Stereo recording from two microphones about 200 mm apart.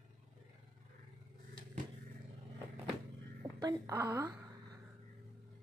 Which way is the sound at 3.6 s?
15° right (ahead or behind).